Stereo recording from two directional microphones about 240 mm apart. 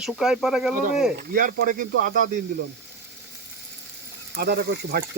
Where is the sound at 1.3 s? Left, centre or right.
Right.